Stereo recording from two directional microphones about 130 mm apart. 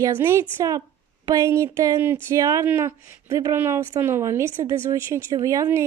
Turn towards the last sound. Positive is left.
turn(degrees=-25)  # may be behind; listen again after turning